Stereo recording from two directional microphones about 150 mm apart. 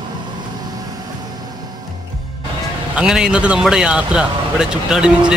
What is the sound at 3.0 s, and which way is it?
A man's voice, 5° right (ahead or behind).